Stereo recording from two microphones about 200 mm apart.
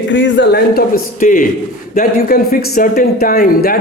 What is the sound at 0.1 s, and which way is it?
A man's voice, 60° left (ahead or behind).